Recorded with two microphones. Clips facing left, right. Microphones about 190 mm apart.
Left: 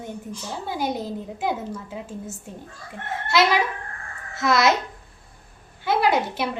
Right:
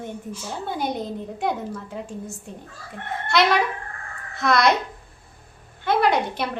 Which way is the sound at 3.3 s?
5° left (ahead or behind).